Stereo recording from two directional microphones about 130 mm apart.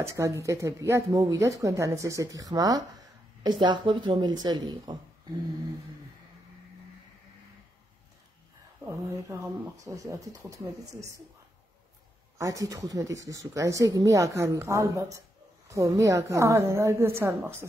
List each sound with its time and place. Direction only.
0.0 s a woman's voice: 20° right (ahead or behind)
8.8 s speech: 20° right (ahead or behind)
12.4 s speech: 25° right (ahead or behind)